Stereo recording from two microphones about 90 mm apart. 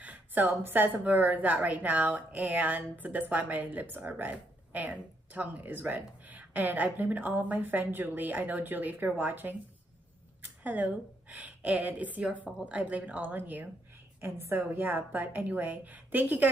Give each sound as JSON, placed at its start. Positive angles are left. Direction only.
{"t": 0.0, "sound": "a woman's voice", "side_deg": -20}